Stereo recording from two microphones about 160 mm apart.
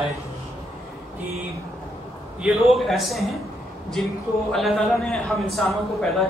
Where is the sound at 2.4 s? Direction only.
Centre (ahead or behind).